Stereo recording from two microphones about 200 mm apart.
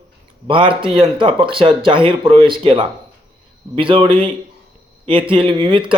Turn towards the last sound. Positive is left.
turn(degrees=-25)  # may be behind; listen again after turning